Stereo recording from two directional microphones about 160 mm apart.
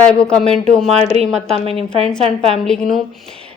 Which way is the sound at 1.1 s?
40° right (ahead or behind).